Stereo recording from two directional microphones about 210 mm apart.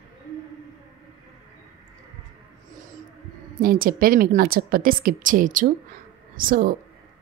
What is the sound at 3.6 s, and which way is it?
A woman's voice, 45° right (ahead or behind).